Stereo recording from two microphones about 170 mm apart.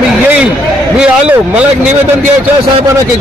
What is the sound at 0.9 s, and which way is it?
Speech, 5° right (ahead or behind).